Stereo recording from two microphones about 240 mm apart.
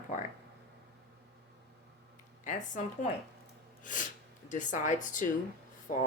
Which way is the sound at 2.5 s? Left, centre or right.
Left.